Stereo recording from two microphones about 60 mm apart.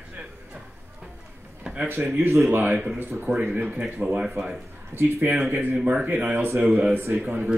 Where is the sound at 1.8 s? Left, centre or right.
Right.